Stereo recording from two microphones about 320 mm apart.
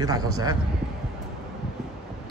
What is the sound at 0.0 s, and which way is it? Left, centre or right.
Speech, centre.